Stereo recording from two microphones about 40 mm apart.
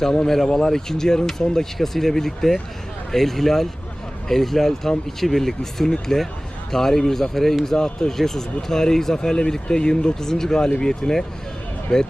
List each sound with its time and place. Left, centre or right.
0.0 s speech: centre